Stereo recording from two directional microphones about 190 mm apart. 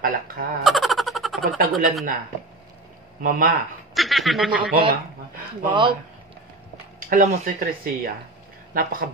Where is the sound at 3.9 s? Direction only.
Centre (ahead or behind).